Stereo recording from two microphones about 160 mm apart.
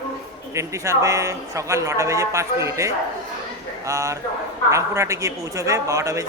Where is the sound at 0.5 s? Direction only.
20° right (ahead or behind).